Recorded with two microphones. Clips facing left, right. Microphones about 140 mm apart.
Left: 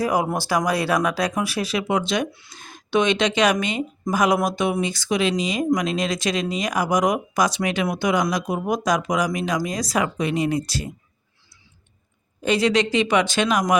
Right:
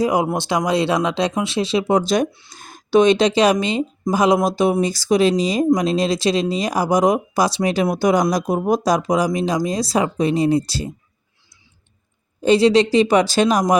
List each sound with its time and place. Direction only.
0.0 s speech: 20° right (ahead or behind)
12.4 s speech: 30° right (ahead or behind)